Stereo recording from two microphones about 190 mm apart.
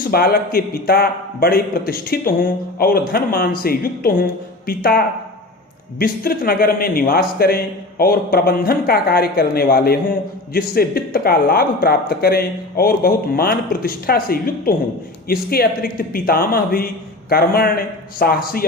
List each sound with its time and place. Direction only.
0.1 s speech: 55° left (ahead or behind)